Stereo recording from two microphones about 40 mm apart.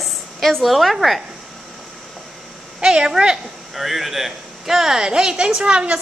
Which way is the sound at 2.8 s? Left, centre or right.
Right.